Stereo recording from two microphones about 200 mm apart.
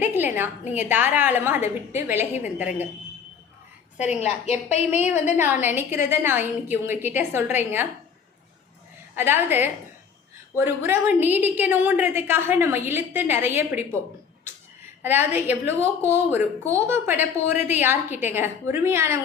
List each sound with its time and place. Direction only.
0.0 s a sound: 10° right (ahead or behind)
0.7 s a woman's voice: 10° right (ahead or behind)
4.0 s a woman's voice: 35° left (ahead or behind)
5.4 s a woman's voice: 10° right (ahead or behind)
9.1 s a woman's voice: 10° right (ahead or behind)
15.0 s a woman's voice: 10° right (ahead or behind)